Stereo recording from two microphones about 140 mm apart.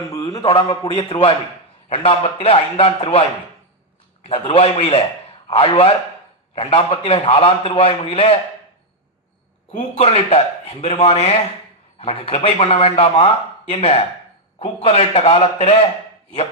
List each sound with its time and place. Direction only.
0.4 s a man's voice: 45° left (ahead or behind)
9.7 s a man's voice: 50° left (ahead or behind)